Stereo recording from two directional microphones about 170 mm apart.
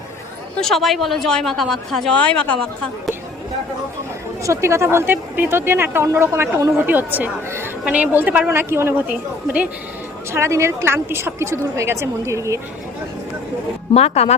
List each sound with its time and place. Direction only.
0.6 s speech: centre (ahead or behind)
4.4 s a woman's voice: 15° right (ahead or behind)
10.3 s a woman's voice: 15° right (ahead or behind)
13.9 s speech: 35° left (ahead or behind)